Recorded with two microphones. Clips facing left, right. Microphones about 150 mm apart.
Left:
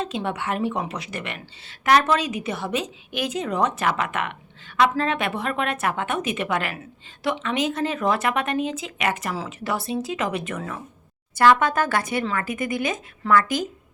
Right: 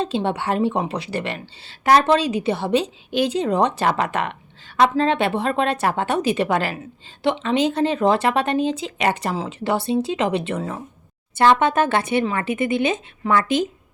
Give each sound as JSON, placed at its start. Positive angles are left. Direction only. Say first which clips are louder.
{"t": 0.0, "sound": "a woman's voice", "louder": "right 5 dB", "side_deg": -30}